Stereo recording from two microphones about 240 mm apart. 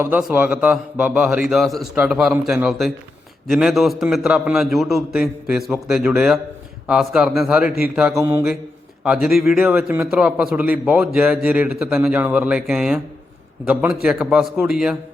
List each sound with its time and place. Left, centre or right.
0.0 s a man's voice: centre